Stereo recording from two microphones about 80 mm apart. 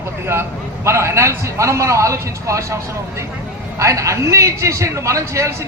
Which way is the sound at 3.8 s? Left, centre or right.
Right.